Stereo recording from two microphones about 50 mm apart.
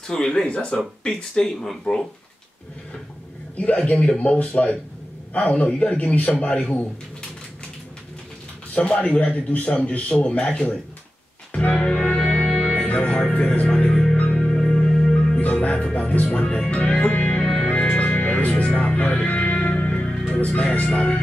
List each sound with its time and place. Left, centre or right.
0.1 s speech: centre
3.5 s a man's voice: left
8.7 s a man's voice: left
10.4 s speech: centre
11.5 s music: left
12.8 s music: left
13.7 s music: centre
14.1 s music: left
14.4 s music: centre
17.9 s music: left
20.3 s a man's voice: left